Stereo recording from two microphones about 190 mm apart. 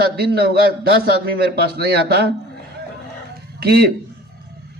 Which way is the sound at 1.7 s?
55° right (ahead or behind).